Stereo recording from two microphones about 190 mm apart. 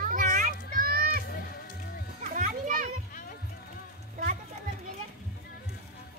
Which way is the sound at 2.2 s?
45° right (ahead or behind).